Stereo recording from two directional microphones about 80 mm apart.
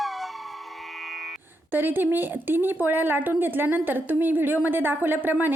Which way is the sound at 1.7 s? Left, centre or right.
Right.